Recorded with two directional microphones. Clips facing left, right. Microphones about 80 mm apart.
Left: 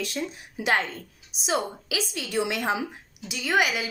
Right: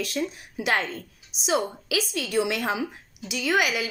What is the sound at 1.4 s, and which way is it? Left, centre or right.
Speech, left.